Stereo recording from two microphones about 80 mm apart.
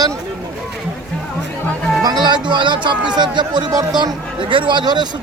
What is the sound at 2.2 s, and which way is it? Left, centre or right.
Speech, right.